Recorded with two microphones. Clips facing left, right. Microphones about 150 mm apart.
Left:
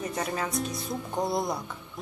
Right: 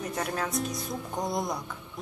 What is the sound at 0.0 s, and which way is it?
Speech, centre (ahead or behind).